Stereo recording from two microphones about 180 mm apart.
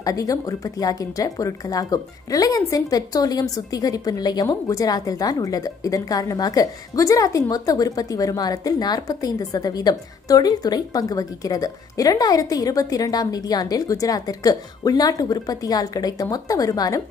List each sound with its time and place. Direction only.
0.0 s speech: 20° left (ahead or behind)